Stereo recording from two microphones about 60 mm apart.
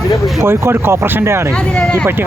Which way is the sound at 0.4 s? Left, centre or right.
Right.